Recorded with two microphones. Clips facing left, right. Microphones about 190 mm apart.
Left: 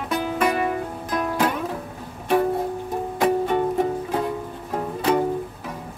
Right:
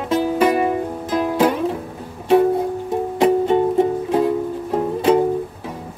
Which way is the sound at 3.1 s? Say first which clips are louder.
Right 5 dB; 25° right (ahead or behind).